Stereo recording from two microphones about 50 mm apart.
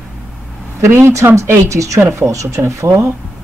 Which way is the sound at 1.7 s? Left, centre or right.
Right.